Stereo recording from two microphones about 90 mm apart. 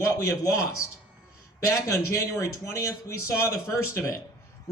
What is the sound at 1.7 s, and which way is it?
Speech, 35° left (ahead or behind).